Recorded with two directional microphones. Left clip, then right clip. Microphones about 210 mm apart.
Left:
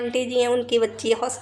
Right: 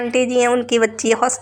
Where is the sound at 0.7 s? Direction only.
30° right (ahead or behind).